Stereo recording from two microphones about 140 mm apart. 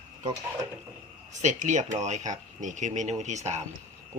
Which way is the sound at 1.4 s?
60° right (ahead or behind).